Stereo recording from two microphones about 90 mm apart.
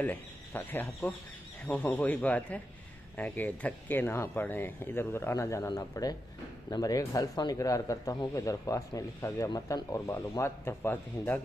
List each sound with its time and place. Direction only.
0.0 s speech: 20° left (ahead or behind)